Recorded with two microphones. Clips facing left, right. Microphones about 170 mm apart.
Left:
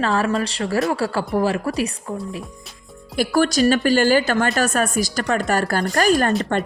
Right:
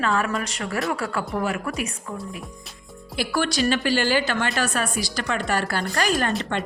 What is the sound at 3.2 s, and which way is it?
Speech, 45° left (ahead or behind).